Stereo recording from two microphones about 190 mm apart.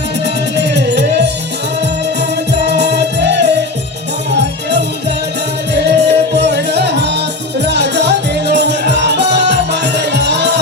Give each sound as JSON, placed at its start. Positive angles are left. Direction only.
{"t": 0.5, "sound": "music", "side_deg": -60}
{"t": 2.5, "sound": "music", "side_deg": -60}